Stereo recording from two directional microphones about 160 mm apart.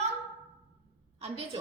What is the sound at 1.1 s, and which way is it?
Speech, 40° right (ahead or behind).